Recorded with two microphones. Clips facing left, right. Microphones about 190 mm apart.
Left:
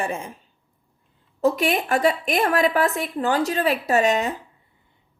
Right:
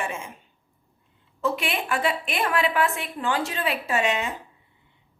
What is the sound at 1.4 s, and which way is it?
A woman's voice, 40° left (ahead or behind).